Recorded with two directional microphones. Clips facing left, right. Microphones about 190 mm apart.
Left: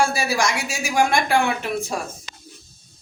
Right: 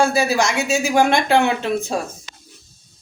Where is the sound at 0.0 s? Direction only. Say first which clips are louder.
Right 4 dB; 20° right (ahead or behind).